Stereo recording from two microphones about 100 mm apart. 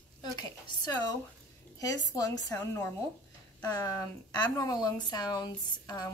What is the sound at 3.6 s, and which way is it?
A woman's voice, 40° left (ahead or behind).